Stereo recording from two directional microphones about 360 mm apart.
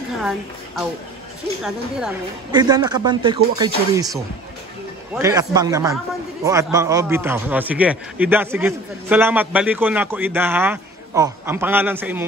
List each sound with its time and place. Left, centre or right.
0.2 s a woman's voice: centre
5.1 s a woman's voice: centre